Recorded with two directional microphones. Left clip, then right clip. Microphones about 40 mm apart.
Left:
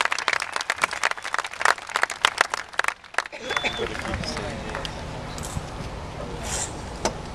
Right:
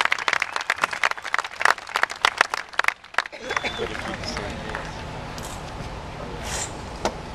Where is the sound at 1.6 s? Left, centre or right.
Right.